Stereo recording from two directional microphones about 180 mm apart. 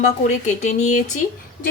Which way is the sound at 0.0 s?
40° left (ahead or behind).